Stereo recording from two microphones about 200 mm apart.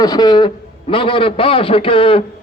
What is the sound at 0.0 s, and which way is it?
A man's voice, 20° left (ahead or behind).